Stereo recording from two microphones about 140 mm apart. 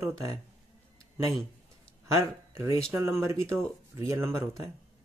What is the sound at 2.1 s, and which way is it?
Speech, 20° right (ahead or behind).